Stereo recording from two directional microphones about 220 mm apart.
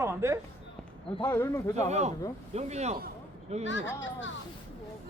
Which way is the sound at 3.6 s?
55° left (ahead or behind).